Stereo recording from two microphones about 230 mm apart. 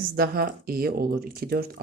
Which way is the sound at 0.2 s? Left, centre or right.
Right.